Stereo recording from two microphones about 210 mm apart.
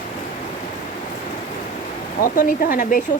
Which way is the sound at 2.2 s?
40° left (ahead or behind).